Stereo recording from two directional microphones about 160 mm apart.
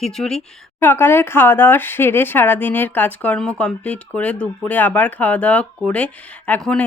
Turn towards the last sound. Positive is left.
turn(degrees=5)  # may be behind; listen again after turning